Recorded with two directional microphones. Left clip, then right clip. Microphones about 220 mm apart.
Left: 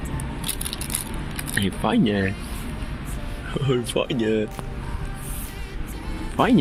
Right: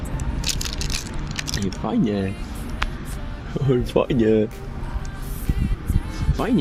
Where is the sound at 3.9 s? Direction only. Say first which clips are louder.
Right 7 dB; 40° right (ahead or behind).